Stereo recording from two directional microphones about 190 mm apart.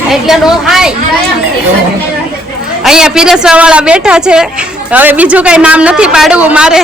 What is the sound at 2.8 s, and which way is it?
A man's voice, 5° right (ahead or behind).